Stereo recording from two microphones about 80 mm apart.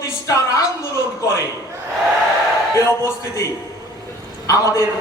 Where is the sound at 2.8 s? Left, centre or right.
Left.